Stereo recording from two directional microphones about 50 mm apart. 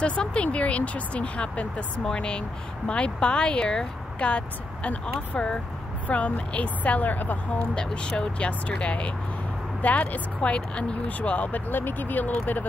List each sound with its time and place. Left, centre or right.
0.0 s speech: left
7.7 s speech: centre; by 12.6 s left